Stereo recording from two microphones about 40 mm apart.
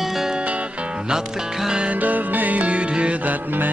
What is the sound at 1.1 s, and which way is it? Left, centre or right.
Music, centre.